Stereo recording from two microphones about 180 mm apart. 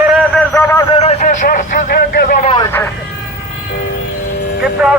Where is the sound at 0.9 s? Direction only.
35° left (ahead or behind).